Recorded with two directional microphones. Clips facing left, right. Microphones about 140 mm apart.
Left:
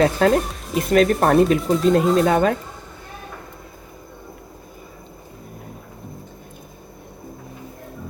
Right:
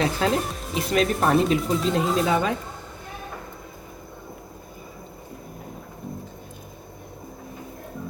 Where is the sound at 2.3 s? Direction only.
50° left (ahead or behind).